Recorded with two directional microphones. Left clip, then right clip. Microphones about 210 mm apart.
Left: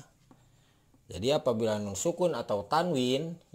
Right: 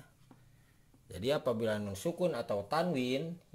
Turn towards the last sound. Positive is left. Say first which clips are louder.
# left 5 dB
turn(degrees=20)  # may be behind; listen again after turning